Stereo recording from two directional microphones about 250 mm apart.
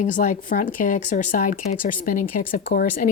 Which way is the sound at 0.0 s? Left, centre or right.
Left.